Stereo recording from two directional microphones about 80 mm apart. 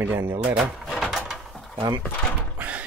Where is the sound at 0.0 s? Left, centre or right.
Right.